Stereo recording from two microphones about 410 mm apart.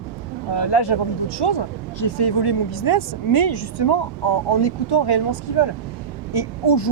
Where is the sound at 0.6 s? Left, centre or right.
Left.